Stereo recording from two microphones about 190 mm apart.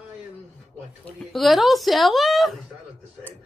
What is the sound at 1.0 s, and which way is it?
Speech, centre (ahead or behind).